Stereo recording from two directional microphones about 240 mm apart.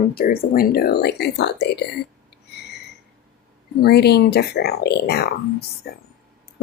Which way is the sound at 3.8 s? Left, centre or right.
Left.